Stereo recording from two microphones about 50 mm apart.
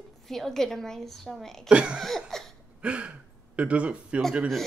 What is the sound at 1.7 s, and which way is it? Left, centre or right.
Speech, right.